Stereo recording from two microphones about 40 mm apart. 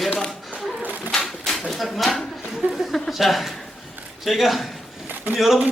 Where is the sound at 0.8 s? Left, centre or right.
Right.